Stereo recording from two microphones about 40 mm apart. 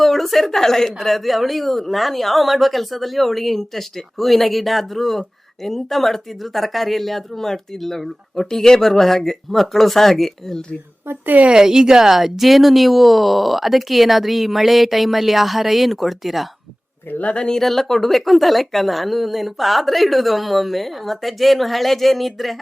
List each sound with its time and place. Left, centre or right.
0.0 s speech: centre
11.4 s speech: centre
17.2 s speech: left
17.6 s speech: centre